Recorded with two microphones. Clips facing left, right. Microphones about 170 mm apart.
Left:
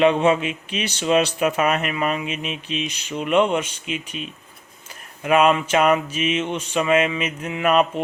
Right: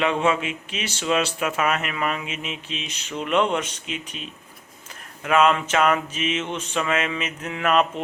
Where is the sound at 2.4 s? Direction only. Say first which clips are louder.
Left 5 dB; 15° left (ahead or behind).